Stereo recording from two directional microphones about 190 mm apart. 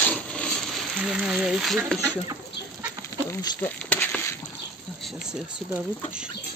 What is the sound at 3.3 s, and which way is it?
Speech, 10° left (ahead or behind).